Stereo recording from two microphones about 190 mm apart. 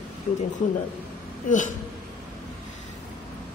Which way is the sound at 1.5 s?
40° left (ahead or behind).